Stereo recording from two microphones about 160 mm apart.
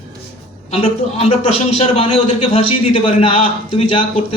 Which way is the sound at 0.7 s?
40° left (ahead or behind).